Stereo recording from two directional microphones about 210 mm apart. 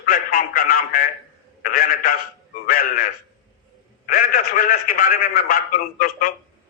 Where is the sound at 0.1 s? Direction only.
40° left (ahead or behind).